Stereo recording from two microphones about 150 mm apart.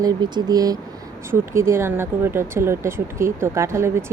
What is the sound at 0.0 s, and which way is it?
Speech, 25° right (ahead or behind).